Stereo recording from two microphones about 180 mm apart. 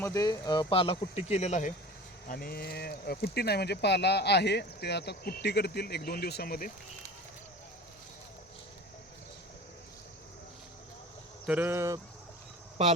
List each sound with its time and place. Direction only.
0.0 s speech: 20° left (ahead or behind); by 1.7 s 40° left (ahead or behind)
2.2 s speech: 55° left (ahead or behind)
11.4 s speech: 10° right (ahead or behind)
12.8 s a man's voice: 30° right (ahead or behind)